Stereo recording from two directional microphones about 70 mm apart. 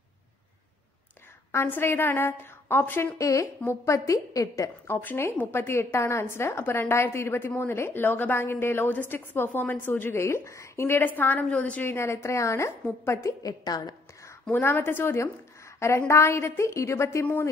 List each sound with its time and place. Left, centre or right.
1.5 s a woman's voice: left
3.2 s a woman's voice: left
4.8 s a woman's voice: left
11.8 s a woman's voice: left
13.4 s a woman's voice: left
14.5 s a woman's voice: left